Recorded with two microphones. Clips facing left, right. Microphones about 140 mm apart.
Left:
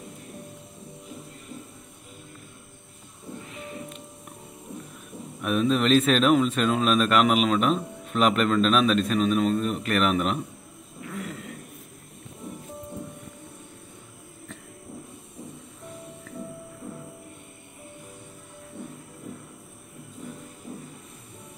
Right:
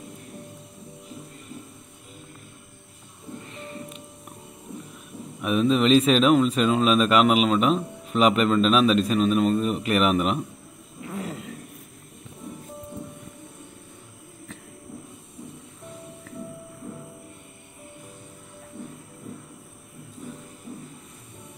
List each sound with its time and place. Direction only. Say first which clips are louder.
3.4 s music: even; centre (ahead or behind)
5.4 s speech: right 2 dB; centre (ahead or behind)
11.1 s a sound: right 3 dB; 30° right (ahead or behind)